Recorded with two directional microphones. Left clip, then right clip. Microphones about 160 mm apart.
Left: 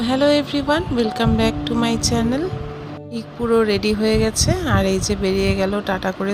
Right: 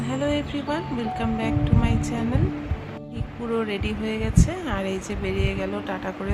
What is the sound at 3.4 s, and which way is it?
Speech, 35° left (ahead or behind).